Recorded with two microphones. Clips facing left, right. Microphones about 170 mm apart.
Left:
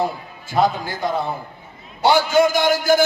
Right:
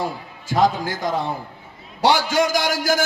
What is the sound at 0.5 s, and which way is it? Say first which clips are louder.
Speech: even; 90° right.